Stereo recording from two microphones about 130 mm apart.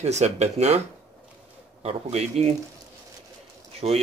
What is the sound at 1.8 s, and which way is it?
Speech, 55° right (ahead or behind).